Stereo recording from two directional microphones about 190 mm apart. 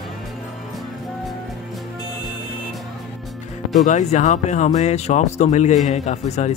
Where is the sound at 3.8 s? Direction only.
40° left (ahead or behind).